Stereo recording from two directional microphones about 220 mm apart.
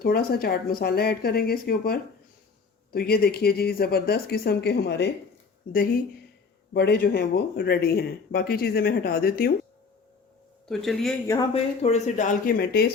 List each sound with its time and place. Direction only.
0.0 s speech: 45° left (ahead or behind)
6.7 s speech: 45° left (ahead or behind)
10.7 s speech: centre (ahead or behind)
11.3 s speech: 20° left (ahead or behind); by 12.8 s 40° left (ahead or behind)